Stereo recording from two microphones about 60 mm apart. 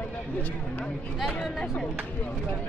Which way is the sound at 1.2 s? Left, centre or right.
Centre.